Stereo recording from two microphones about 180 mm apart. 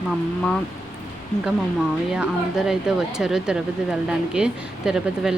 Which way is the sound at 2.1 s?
5° right (ahead or behind).